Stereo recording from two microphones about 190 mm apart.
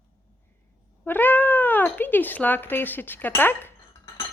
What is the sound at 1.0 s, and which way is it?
Speech, 10° left (ahead or behind).